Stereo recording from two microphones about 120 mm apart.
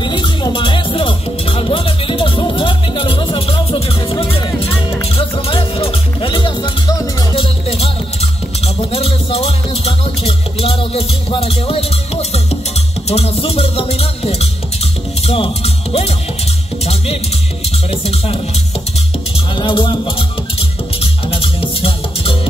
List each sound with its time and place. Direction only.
0.0 s music: 40° left (ahead or behind)
7.3 s music: 50° left (ahead or behind)
18.0 s music: 55° left (ahead or behind)
19.5 s music: 45° left (ahead or behind)